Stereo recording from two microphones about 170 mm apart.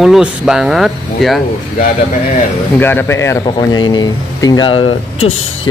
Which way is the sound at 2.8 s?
10° left (ahead or behind).